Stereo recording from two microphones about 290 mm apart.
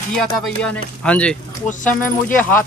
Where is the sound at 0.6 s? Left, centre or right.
Centre.